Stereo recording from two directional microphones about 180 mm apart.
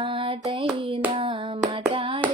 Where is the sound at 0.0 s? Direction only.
30° right (ahead or behind).